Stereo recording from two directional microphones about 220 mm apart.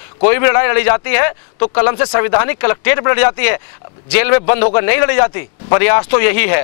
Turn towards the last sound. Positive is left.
turn(degrees=15)  # may be behind; listen again after turning